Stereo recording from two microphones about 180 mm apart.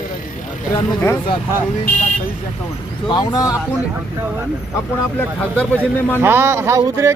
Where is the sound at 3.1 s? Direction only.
25° left (ahead or behind).